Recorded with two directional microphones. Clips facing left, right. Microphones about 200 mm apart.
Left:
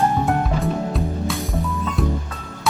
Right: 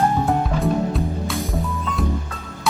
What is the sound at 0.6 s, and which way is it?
Music, centre (ahead or behind).